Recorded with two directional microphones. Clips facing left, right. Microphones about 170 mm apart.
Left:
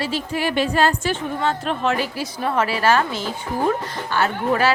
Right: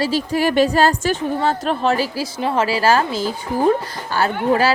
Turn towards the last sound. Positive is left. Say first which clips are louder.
# right 3 dB
turn(degrees=-35)  # may be behind; listen again after turning